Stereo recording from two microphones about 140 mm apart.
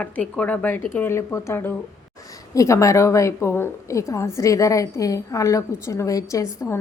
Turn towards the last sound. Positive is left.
turn(degrees=20)  # may be behind; listen again after turning